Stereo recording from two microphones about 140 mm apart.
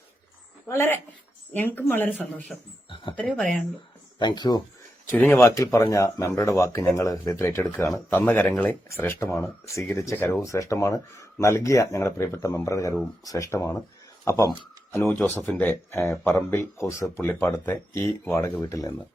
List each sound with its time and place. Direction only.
0.7 s speech: 20° left (ahead or behind)
2.9 s a sound: 35° left (ahead or behind)
3.2 s speech: 5° left (ahead or behind)
4.2 s speech: 30° left (ahead or behind)